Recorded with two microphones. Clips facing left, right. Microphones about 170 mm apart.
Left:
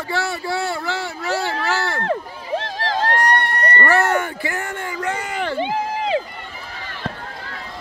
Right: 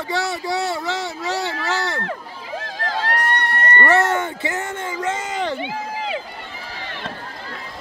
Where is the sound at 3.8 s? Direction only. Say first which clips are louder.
Even; 20° right (ahead or behind).